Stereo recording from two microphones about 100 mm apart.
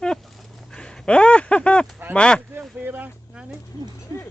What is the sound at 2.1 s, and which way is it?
Speech, 10° left (ahead or behind).